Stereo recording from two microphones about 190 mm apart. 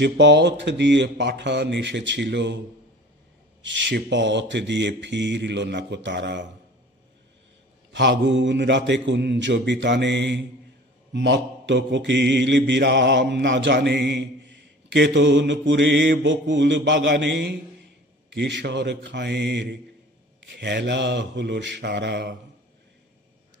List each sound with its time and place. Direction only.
0.0 s mantra: 65° right (ahead or behind)
3.6 s mantra: 70° right (ahead or behind)
7.9 s mantra: 70° right (ahead or behind)
18.3 s mantra: 70° right (ahead or behind)